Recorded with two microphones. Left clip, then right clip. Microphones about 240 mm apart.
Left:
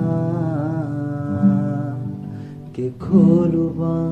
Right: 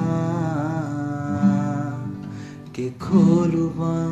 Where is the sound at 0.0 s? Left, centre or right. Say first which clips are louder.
Left 2 dB; right.